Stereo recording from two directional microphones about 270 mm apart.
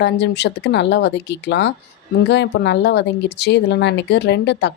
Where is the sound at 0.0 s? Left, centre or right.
Left.